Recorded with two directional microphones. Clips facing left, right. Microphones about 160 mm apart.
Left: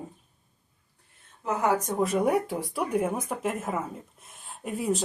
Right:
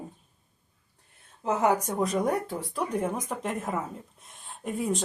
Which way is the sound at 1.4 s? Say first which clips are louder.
Right 1 dB; 20° right (ahead or behind).